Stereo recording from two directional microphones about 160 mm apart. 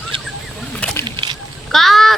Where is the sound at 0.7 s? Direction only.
5° left (ahead or behind).